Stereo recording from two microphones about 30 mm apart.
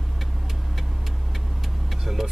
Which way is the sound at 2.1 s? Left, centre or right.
Centre.